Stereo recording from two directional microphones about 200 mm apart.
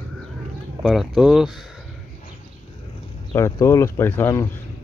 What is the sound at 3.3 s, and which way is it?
Speech, 15° left (ahead or behind).